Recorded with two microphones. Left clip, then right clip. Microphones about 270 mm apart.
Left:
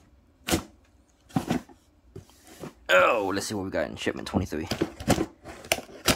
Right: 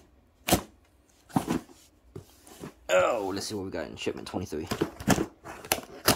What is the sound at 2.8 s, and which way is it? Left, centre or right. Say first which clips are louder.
Speech: left 4 dB; centre.